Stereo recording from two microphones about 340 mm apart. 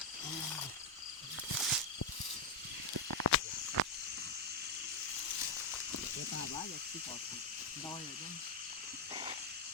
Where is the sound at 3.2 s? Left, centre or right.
Left.